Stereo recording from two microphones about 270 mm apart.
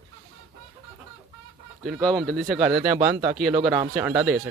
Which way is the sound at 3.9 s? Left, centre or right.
Centre.